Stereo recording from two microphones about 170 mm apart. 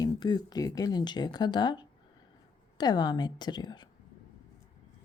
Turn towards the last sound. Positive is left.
turn(degrees=25)  # may be behind; listen again after turning